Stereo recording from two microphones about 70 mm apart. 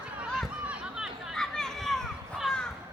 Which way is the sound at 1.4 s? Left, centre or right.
Centre.